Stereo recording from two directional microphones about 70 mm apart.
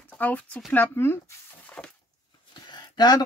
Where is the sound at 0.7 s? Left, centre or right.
Left.